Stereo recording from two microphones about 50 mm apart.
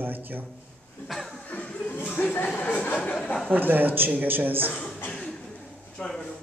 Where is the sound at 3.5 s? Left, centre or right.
Right.